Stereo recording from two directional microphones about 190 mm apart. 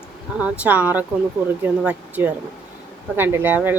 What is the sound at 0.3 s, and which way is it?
Speech, 5° right (ahead or behind).